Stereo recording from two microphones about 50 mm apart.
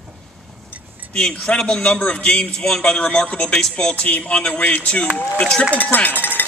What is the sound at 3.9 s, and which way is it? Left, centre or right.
A man's voice, left.